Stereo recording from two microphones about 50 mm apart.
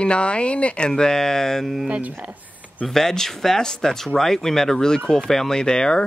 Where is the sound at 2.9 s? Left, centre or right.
Centre.